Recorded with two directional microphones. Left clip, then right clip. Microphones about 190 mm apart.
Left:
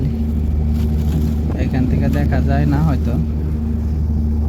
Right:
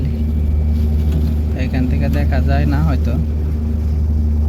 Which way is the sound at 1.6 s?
5° left (ahead or behind).